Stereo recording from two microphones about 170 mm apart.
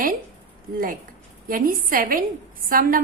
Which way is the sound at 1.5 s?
55° right (ahead or behind).